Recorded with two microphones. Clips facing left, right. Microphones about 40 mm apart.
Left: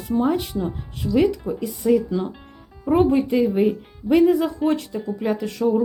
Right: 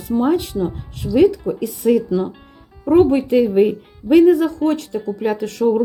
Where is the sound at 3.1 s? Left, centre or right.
Right.